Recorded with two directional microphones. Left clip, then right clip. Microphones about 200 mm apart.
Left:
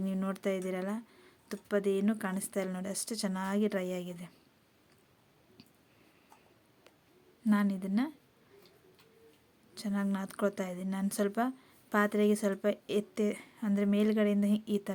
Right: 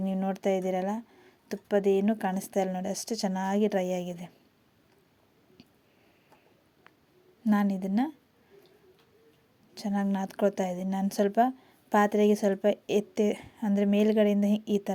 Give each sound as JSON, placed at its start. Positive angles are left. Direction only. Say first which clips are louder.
{"t": 0.0, "sound": "a woman's voice", "louder": "right 6 dB", "side_deg": -10}
{"t": 7.4, "sound": "a woman's voice", "louder": "right 4 dB", "side_deg": -15}
{"t": 9.7, "sound": "a woman's voice", "louder": "right 5 dB", "side_deg": -15}